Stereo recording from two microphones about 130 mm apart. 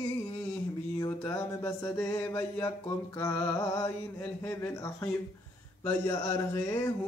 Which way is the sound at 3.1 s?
20° left (ahead or behind).